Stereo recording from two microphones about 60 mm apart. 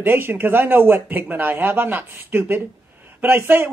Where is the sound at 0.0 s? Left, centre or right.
Right.